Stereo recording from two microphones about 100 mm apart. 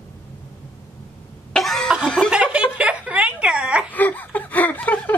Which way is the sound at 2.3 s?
10° right (ahead or behind).